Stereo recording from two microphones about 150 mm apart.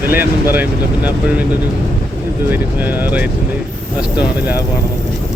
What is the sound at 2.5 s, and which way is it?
Speech, 10° right (ahead or behind).